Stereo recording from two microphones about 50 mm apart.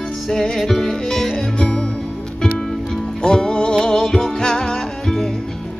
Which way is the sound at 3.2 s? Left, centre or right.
Centre.